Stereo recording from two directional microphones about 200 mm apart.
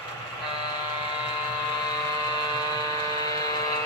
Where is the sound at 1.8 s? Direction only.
20° left (ahead or behind).